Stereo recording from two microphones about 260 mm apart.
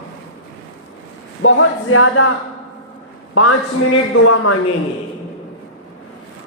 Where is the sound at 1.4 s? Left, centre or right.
Left.